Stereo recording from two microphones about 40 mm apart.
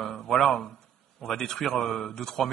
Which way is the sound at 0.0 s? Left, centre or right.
Centre.